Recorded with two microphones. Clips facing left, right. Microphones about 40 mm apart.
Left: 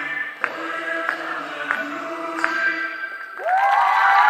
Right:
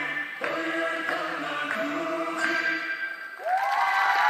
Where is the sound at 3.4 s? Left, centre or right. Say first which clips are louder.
Left 7 dB; left.